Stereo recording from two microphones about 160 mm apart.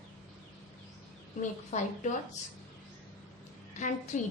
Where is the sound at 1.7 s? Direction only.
45° left (ahead or behind).